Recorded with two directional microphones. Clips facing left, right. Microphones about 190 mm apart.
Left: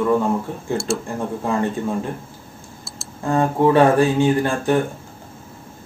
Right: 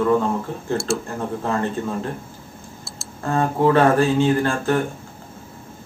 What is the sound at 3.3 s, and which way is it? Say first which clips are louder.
Speech: left 2 dB; 15° left (ahead or behind).